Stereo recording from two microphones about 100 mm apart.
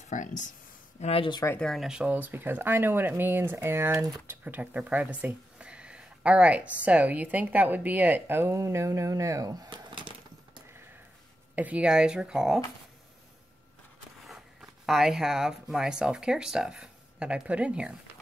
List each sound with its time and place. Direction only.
1.0 s speech: 75° left (ahead or behind)
1.6 s speech: 5° left (ahead or behind)
1.9 s speech: 10° right (ahead or behind); by 10.6 s 50° right (ahead or behind)
11.5 s speech: 15° right (ahead or behind)
14.2 s speech: 5° right (ahead or behind)